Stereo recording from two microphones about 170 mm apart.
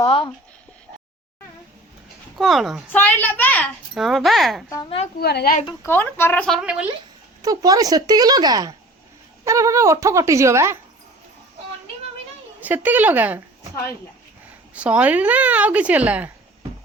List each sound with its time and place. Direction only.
0.0 s a sound: 30° left (ahead or behind)
2.4 s speech: centre (ahead or behind)
2.9 s speech: 10° left (ahead or behind)
3.9 s speech: centre (ahead or behind)
5.2 s a woman's voice: 70° left (ahead or behind)
5.8 s speech: 15° left (ahead or behind)
6.6 s speech: 5° right (ahead or behind)
7.4 s speech: 20° right (ahead or behind)
12.5 s speech: 10° right (ahead or behind)
14.8 s speech: 5° right (ahead or behind)